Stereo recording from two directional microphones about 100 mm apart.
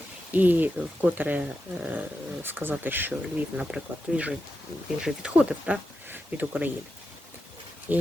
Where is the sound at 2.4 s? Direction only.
20° right (ahead or behind).